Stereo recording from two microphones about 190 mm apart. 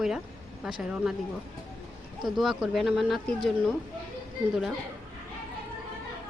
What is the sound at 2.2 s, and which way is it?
Speech, centre (ahead or behind).